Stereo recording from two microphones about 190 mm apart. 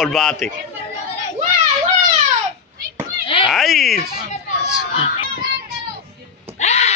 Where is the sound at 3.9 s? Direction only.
50° left (ahead or behind).